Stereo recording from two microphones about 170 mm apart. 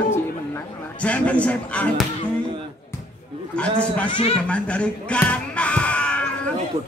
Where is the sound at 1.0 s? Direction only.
10° left (ahead or behind).